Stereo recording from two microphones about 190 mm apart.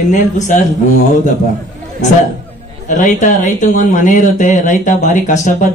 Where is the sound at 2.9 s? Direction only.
40° left (ahead or behind).